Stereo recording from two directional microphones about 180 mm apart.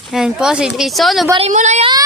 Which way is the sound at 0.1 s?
5° right (ahead or behind).